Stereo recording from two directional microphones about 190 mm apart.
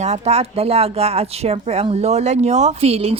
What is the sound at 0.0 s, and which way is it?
Speech, 35° right (ahead or behind).